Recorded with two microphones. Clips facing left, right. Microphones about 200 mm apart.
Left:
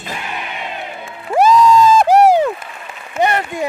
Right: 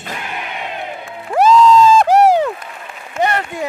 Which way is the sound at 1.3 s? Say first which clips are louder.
Right 1 dB; 10° left (ahead or behind).